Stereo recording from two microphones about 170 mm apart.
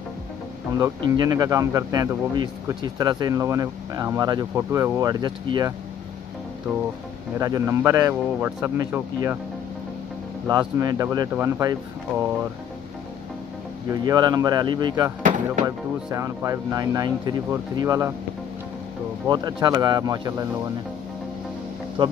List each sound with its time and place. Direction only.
0.7 s speech: 25° right (ahead or behind)
7.3 s a man's voice: 20° right (ahead or behind)
10.5 s speech: 25° right (ahead or behind)
14.0 s speech: 25° right (ahead or behind)
15.2 s speech: 50° right (ahead or behind)
15.6 s speech: 20° right (ahead or behind)
19.2 s speech: 25° right (ahead or behind)
22.0 s speech: 30° right (ahead or behind)